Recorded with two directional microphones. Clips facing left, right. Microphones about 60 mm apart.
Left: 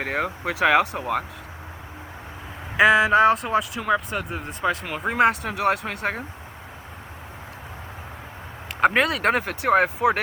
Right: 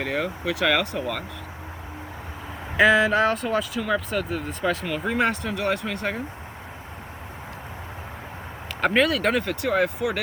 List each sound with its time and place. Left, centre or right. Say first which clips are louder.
0.0 s speech: left 1 dB; left
2.7 s speech: left 2 dB; centre
4.4 s speech: even; centre
4.9 s speech: left 3 dB; centre
5.8 s speech: even; left
9.0 s speech: even; left